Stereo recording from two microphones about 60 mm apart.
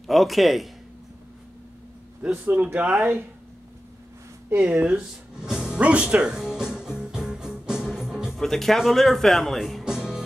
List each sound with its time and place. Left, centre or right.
0.0 s speech: centre
2.3 s speech: right
4.6 s music: right
8.4 s speech: centre
9.8 s music: centre